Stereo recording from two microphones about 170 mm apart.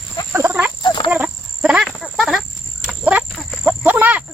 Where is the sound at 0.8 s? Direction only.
25° left (ahead or behind).